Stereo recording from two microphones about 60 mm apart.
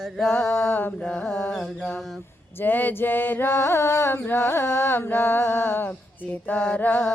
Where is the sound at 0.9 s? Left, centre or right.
Centre.